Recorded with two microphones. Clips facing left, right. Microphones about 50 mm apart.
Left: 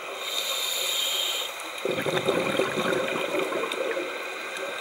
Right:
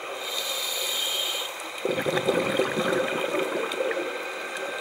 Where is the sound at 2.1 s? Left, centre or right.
Centre.